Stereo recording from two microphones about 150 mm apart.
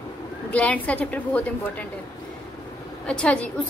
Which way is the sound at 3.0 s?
5° left (ahead or behind).